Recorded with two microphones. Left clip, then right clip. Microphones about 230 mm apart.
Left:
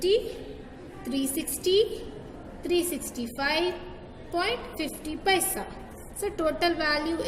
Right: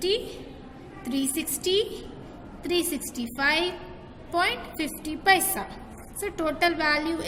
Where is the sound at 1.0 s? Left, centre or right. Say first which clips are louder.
Right 1 dB; right.